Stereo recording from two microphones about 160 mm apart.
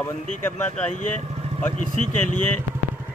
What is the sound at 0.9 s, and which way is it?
Speech, 50° left (ahead or behind).